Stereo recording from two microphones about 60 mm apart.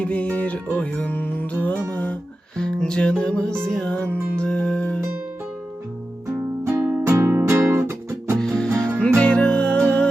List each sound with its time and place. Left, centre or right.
0.0 s music: left
2.6 s music: centre
6.7 s music: right
7.0 s music: right
7.3 s music: right
8.4 s music: centre